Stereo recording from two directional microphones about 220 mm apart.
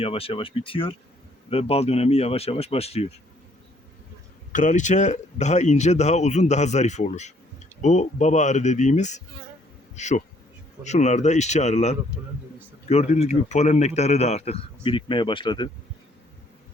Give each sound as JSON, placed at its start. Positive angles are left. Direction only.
{"t": 0.0, "sound": "speech", "side_deg": 25}
{"t": 4.5, "sound": "speech", "side_deg": 35}
{"t": 9.9, "sound": "bee", "side_deg": 30}
{"t": 10.8, "sound": "speech", "side_deg": 30}